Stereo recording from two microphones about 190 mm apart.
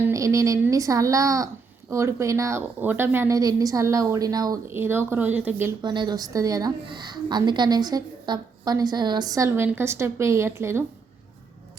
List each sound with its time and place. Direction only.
0.0 s a woman's voice: 15° right (ahead or behind)
5.8 s a woman's voice: 25° right (ahead or behind)